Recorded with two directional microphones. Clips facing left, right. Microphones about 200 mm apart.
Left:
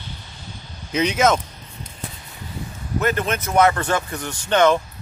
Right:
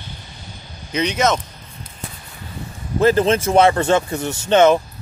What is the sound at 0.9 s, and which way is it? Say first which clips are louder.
Speech: even; 5° left (ahead or behind).